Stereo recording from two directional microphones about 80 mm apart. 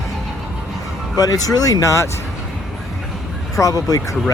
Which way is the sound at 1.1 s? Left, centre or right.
Left.